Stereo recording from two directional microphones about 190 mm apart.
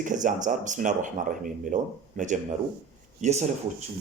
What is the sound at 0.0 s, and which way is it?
Speech, 40° right (ahead or behind).